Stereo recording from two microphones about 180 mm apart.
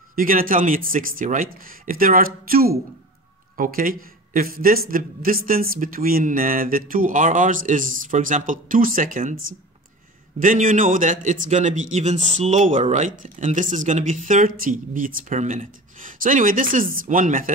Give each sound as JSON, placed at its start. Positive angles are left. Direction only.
{"t": 0.1, "sound": "speech", "side_deg": -50}
{"t": 10.4, "sound": "speech", "side_deg": -45}